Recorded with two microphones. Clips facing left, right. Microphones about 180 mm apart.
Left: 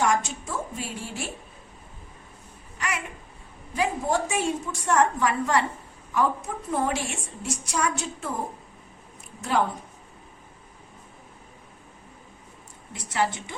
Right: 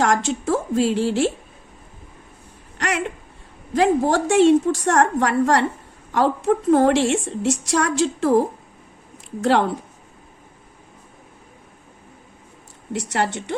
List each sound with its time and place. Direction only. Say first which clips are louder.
0.0 s a woman's voice: right 5 dB; 90° right
2.7 s a sound: right 8 dB; 75° right (ahead or behind)
3.8 s a woman's voice: right 8 dB; 80° right
6.1 s a woman's voice: right 7 dB; 80° right
7.3 s a woman's voice: right 12 dB; 90° right; by 9.7 s 75° right (ahead or behind)
12.9 s a woman's voice: right 4 dB; 70° right (ahead or behind)